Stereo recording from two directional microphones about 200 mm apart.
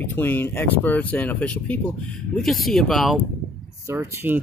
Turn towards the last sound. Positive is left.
turn(degrees=-10)  # may be behind; listen again after turning